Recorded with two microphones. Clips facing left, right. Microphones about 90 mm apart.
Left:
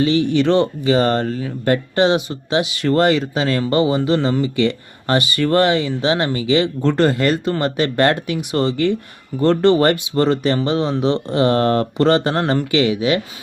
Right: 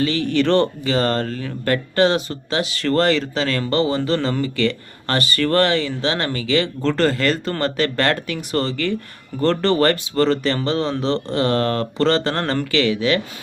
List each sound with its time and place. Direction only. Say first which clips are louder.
0.0 s speech: left 3 dB; 20° left (ahead or behind)
0.9 s speech: left 4 dB; 20° left (ahead or behind)
8.7 s speech: left 5 dB; 25° left (ahead or behind)
9.4 s speech: left 3 dB; 10° left (ahead or behind)